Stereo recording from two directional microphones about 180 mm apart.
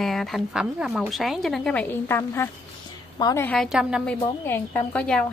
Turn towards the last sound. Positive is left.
turn(degrees=5)  # may be behind; listen again after turning